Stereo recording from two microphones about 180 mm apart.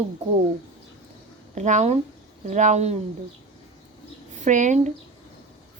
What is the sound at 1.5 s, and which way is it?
Speech, 40° right (ahead or behind).